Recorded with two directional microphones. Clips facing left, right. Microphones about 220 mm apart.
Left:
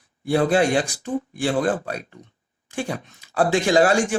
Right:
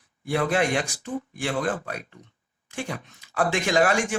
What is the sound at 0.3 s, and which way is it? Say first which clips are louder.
Speech: left 5 dB; 30° left (ahead or behind).